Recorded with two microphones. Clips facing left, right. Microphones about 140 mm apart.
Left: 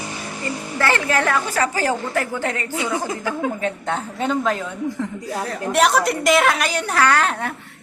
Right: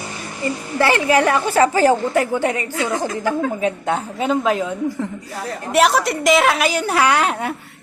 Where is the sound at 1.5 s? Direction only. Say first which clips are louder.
Right 7 dB; 30° right (ahead or behind).